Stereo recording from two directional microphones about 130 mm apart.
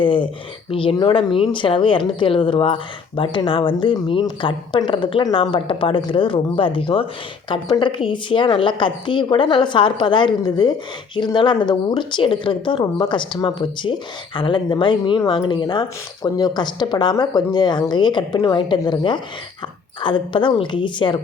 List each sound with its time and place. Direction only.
0.0 s a woman's voice: 40° left (ahead or behind)